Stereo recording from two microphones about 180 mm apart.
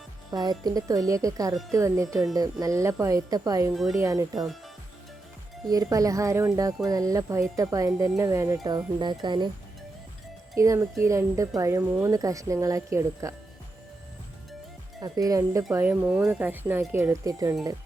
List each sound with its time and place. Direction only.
0.3 s speech: 20° right (ahead or behind)
5.6 s speech: 20° right (ahead or behind)
10.5 s speech: 15° right (ahead or behind)
15.0 s speech: 20° right (ahead or behind)